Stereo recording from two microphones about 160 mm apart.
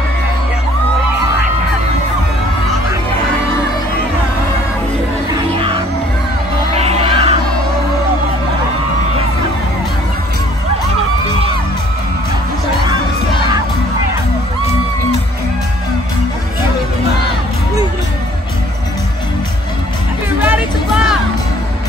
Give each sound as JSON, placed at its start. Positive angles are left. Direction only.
{"t": 5.5, "sound": "music", "side_deg": -30}
{"t": 20.3, "sound": "music", "side_deg": -10}